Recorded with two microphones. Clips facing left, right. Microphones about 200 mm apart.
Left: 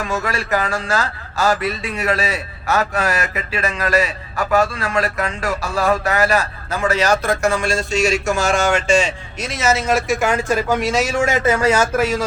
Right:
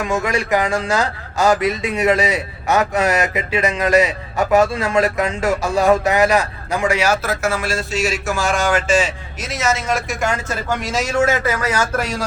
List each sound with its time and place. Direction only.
0.0 s a man's voice: 15° right (ahead or behind); by 11.0 s 5° left (ahead or behind)
11.4 s speech: 25° left (ahead or behind)
11.9 s speech: 5° left (ahead or behind)